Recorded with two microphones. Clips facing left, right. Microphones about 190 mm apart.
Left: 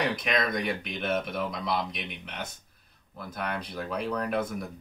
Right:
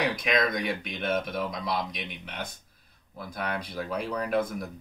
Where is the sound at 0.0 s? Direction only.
Centre (ahead or behind).